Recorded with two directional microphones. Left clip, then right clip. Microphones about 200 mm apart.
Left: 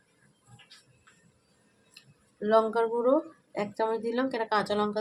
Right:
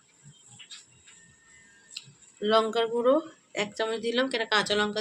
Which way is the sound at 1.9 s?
35° left (ahead or behind).